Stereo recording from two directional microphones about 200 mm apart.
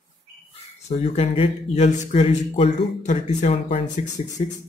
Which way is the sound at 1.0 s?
30° left (ahead or behind).